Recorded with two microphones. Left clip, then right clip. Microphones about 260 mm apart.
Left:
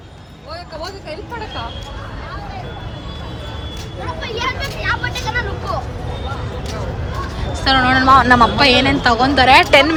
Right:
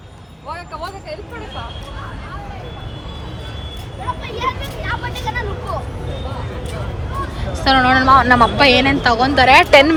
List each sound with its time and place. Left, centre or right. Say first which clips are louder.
4.9 s vehicle: left 3 dB; left
7.5 s a woman's voice: right 1 dB; centre